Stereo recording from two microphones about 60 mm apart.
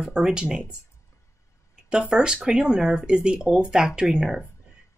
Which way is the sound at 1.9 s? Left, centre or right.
Centre.